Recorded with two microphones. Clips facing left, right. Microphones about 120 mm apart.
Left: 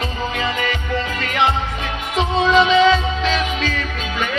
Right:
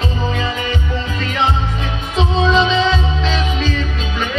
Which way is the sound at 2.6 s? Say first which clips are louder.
Left 2 dB; 25° right (ahead or behind).